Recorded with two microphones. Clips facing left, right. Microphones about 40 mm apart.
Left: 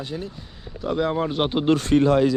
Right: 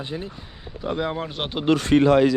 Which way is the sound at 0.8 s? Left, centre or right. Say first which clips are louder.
Left 3 dB; centre.